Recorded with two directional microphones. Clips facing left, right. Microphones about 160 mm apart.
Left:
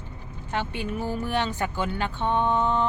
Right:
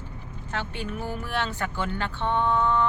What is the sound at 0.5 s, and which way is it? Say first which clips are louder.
Vehicle: left 3 dB; 15° left (ahead or behind).